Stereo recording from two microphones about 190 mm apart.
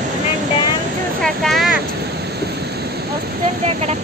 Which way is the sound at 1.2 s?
Centre (ahead or behind).